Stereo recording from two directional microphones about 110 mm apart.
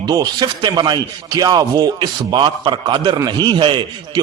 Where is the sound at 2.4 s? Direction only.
50° right (ahead or behind).